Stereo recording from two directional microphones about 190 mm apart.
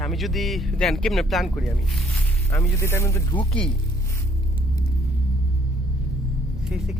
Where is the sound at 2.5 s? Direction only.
15° left (ahead or behind).